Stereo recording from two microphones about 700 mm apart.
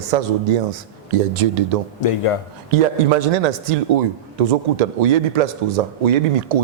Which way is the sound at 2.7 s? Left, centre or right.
Right.